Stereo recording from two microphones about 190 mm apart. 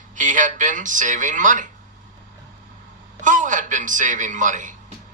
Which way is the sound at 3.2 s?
45° right (ahead or behind).